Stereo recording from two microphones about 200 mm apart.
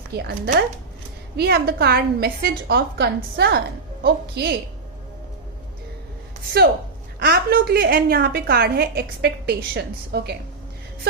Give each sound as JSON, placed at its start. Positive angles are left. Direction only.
{"t": 0.1, "sound": "a woman's voice", "side_deg": -55}
{"t": 7.2, "sound": "a woman's voice", "side_deg": -50}